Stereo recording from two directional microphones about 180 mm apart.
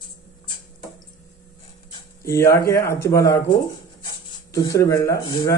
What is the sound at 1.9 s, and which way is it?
Speech, 15° left (ahead or behind).